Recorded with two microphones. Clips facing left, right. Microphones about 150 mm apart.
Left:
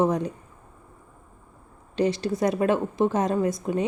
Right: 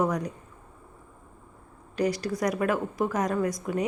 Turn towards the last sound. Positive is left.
turn(degrees=25)  # may be behind; listen again after turning